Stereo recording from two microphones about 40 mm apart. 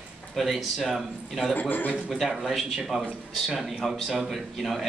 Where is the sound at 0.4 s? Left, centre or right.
Centre.